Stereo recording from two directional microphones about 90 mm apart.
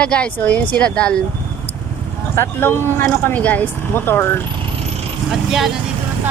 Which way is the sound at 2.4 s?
20° left (ahead or behind).